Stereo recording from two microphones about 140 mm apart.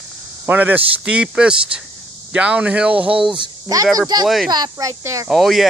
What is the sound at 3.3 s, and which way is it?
Speech, 30° right (ahead or behind).